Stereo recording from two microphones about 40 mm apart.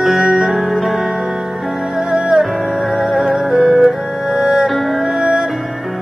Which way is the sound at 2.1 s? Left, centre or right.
Right.